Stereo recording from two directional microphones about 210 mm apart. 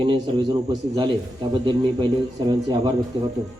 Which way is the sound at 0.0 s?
25° right (ahead or behind).